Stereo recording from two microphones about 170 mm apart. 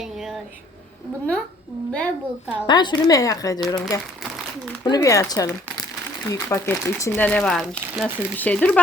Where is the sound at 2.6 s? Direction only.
25° left (ahead or behind).